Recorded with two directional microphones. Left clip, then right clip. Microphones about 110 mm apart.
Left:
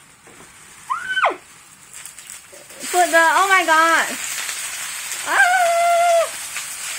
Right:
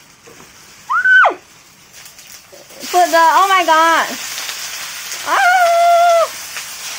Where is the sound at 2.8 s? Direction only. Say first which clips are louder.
Right 4 dB; 25° right (ahead or behind).